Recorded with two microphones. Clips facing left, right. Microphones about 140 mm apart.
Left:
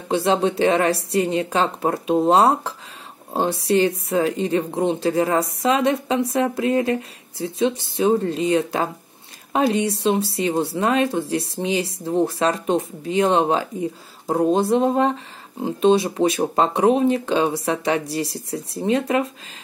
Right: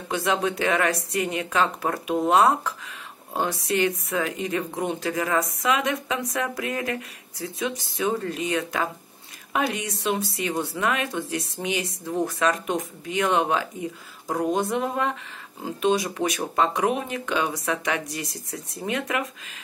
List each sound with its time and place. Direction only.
0.1 s speech: 30° left (ahead or behind)